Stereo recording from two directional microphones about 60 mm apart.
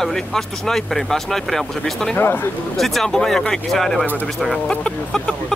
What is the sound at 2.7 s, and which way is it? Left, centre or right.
Speech, centre.